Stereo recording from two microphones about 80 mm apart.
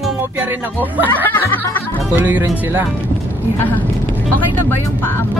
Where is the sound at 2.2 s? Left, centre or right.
Right.